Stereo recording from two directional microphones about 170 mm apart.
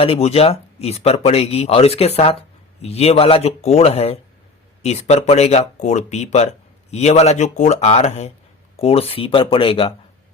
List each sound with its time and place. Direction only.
0.0 s speech: 35° left (ahead or behind)